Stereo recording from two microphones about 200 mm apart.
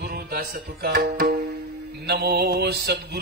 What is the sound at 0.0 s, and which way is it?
Music, 50° right (ahead or behind).